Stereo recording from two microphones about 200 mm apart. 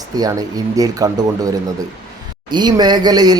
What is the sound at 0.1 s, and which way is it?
Speech, 20° right (ahead or behind).